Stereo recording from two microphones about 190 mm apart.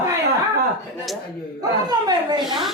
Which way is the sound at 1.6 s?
20° right (ahead or behind).